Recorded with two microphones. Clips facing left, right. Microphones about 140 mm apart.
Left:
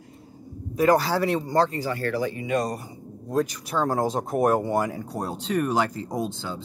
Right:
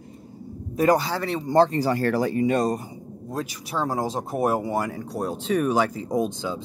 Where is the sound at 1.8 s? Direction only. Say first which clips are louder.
Right 4 dB; 40° right (ahead or behind).